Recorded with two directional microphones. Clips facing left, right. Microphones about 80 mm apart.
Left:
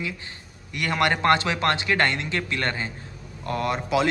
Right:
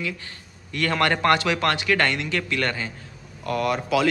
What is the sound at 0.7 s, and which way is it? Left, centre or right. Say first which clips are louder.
A man's voice: right 1 dB; centre.